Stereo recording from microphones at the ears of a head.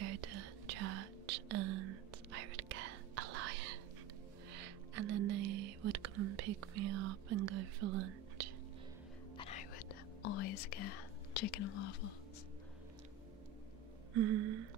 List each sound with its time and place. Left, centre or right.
0.0 s whispering: right
9.4 s whispering: left
14.1 s a sound: right